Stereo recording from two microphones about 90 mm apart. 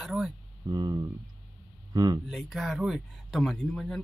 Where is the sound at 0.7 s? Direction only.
45° right (ahead or behind).